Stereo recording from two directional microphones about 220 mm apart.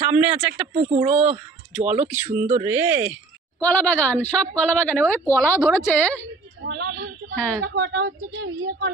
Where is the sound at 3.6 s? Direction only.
5° left (ahead or behind).